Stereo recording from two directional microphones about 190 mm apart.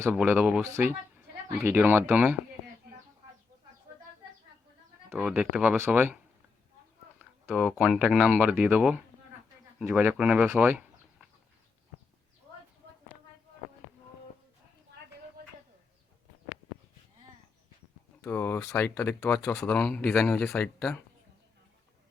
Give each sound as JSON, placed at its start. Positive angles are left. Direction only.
{"t": 0.0, "sound": "speech", "side_deg": -5}
{"t": 5.0, "sound": "speech", "side_deg": -5}
{"t": 7.2, "sound": "speech", "side_deg": -5}
{"t": 15.4, "sound": "a sound", "side_deg": -55}
{"t": 18.2, "sound": "speech", "side_deg": 15}